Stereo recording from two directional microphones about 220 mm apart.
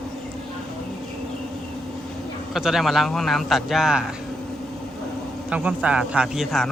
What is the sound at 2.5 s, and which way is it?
Speech, centre (ahead or behind).